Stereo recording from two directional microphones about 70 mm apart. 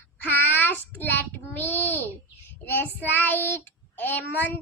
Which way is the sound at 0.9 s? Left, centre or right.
Left.